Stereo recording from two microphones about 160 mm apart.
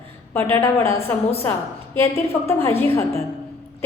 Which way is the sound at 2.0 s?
15° left (ahead or behind).